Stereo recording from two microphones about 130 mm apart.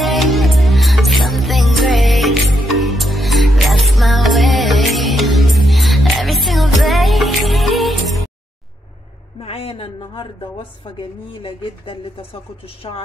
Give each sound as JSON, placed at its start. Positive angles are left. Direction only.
{"t": 0.0, "sound": "music", "side_deg": 0}
{"t": 9.4, "sound": "a woman's voice", "side_deg": 50}